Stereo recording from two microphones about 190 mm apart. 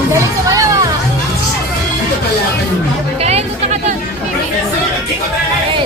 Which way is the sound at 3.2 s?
35° right (ahead or behind).